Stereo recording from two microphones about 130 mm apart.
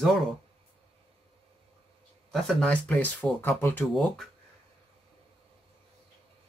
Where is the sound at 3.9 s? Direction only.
Centre (ahead or behind).